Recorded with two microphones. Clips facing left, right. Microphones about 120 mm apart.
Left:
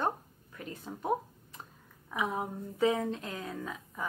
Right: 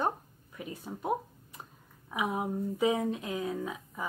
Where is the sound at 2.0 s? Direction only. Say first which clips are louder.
Right 2 dB; 10° right (ahead or behind).